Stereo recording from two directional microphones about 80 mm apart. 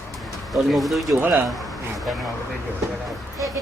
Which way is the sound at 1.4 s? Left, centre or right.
Centre.